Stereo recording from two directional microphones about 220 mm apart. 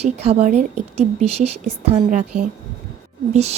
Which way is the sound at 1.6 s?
30° right (ahead or behind).